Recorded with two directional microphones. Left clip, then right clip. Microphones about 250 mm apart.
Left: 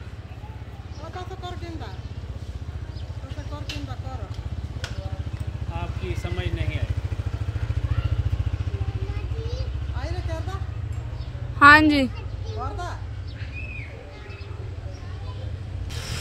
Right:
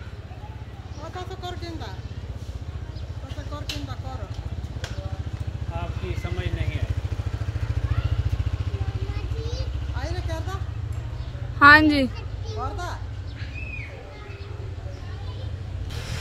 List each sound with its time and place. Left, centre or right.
1.1 s a sound: right
5.8 s vehicle: left
9.1 s vehicle: right
9.9 s vehicle: right
11.6 s a woman's voice: centre
12.5 s a sound: centre